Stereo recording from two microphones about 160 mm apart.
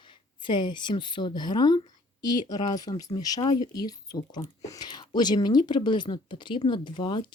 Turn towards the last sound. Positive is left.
turn(degrees=30)  # may be behind; listen again after turning